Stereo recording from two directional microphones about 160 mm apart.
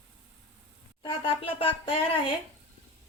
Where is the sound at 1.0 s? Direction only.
35° left (ahead or behind).